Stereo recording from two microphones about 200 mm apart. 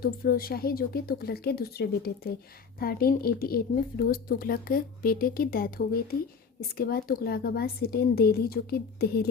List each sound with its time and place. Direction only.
0.0 s a woman's voice: 50° left (ahead or behind)